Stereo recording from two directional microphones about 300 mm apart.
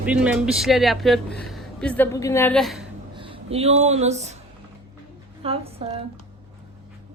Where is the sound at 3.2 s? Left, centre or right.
Centre.